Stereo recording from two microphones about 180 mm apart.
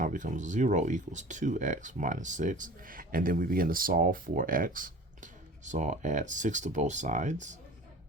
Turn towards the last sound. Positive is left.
turn(degrees=-40)  # may be behind; listen again after turning